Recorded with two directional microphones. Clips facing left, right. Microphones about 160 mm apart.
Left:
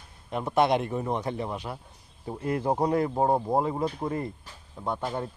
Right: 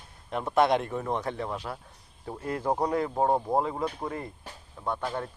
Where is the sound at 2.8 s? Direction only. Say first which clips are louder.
Left 3 dB; 25° left (ahead or behind).